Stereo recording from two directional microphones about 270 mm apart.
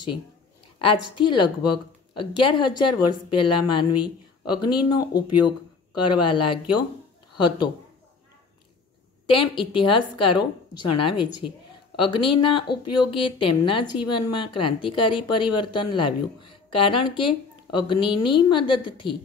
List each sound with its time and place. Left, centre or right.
1.1 s a woman's voice: centre
9.3 s a woman's voice: centre